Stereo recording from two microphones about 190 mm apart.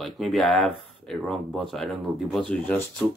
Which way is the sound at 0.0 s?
Centre (ahead or behind).